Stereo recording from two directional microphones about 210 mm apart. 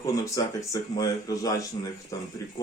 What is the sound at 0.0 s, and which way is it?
A man's voice, 15° left (ahead or behind).